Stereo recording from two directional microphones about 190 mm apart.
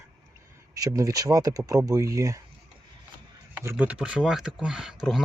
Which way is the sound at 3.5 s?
10° right (ahead or behind).